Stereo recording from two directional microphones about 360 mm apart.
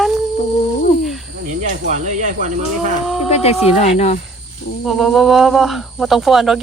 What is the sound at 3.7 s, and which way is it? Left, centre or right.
Speech, centre.